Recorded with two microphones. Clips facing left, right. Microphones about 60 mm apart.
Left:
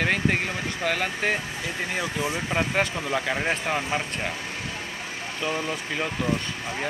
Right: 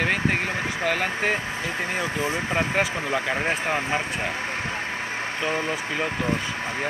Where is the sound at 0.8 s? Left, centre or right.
Centre.